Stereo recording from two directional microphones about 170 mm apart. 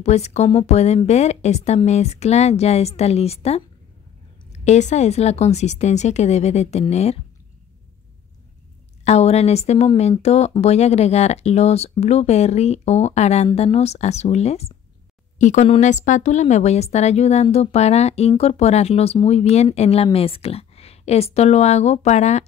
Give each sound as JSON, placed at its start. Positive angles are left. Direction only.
{"t": 0.0, "sound": "speech", "side_deg": 40}
{"t": 9.0, "sound": "speech", "side_deg": 40}